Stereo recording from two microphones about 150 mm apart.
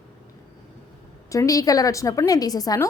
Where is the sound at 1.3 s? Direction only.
20° left (ahead or behind).